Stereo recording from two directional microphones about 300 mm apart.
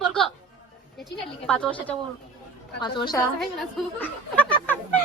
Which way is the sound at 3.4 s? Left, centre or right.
Centre.